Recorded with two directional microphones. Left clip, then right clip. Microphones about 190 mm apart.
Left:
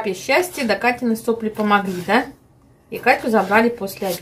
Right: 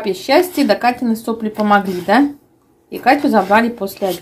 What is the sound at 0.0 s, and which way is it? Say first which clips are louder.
Speech: right 5 dB; 35° right (ahead or behind).